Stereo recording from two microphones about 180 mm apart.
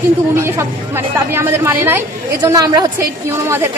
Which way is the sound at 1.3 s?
15° right (ahead or behind).